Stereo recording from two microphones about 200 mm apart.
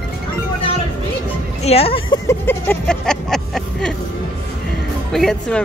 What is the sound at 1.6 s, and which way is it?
Speech, 30° left (ahead or behind).